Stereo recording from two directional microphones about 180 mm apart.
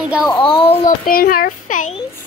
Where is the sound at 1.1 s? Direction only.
55° left (ahead or behind).